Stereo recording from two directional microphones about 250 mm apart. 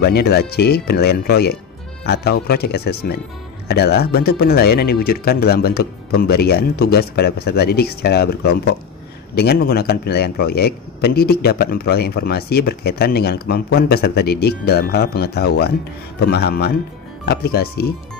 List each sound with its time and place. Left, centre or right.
0.0 s speech: left